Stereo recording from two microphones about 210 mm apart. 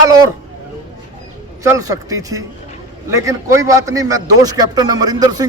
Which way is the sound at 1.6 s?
15° right (ahead or behind).